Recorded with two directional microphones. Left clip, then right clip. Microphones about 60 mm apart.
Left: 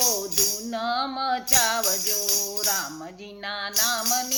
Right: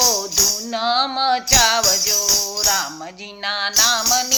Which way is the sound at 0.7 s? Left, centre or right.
Left.